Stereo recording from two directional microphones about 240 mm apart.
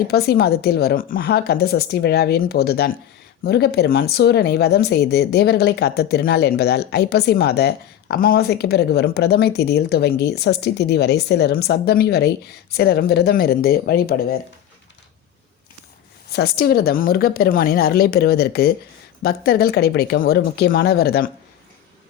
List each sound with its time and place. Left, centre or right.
0.1 s a woman's voice: left
16.3 s a woman's voice: left